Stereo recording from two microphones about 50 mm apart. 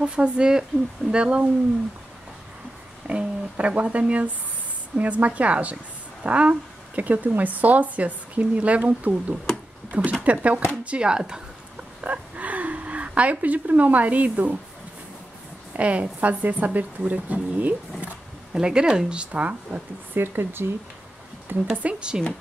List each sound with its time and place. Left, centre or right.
0.0 s speech: centre
3.1 s a woman's voice: right
12.0 s speech: right
15.7 s a woman's voice: right
18.5 s speech: centre
20.2 s speech: right
21.8 s speech: centre